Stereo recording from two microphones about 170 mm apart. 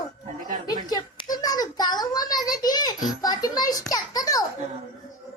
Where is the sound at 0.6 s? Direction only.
25° left (ahead or behind).